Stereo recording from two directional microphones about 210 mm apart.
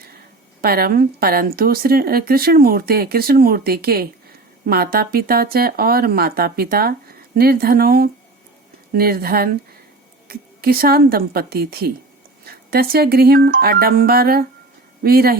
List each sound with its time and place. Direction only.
0.6 s speech: 45° right (ahead or behind)